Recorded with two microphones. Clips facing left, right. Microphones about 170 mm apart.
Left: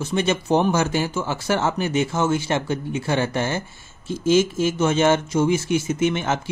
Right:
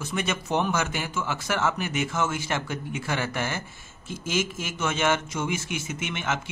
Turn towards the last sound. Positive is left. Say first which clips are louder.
# left 9 dB
turn(degrees=35)  # may be behind; listen again after turning